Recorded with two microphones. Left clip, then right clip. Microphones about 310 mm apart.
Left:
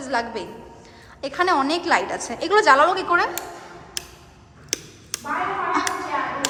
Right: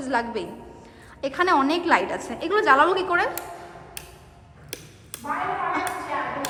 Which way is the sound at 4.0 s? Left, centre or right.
Left.